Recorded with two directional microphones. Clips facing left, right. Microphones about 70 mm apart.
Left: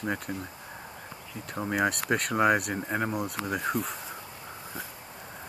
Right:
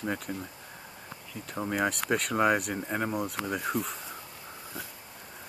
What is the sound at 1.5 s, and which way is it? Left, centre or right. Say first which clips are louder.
Speech: left 2 dB; centre.